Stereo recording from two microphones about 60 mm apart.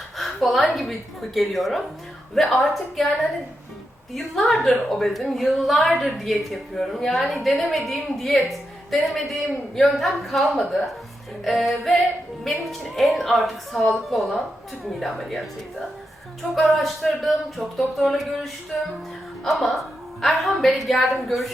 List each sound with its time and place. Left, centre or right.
0.2 s a woman's voice: centre
16.6 s a woman's voice: centre